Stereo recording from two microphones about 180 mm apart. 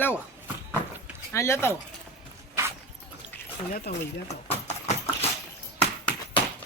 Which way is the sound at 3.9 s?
60° left (ahead or behind).